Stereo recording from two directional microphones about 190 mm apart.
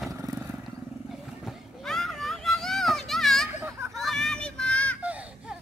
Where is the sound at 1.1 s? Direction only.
Centre (ahead or behind).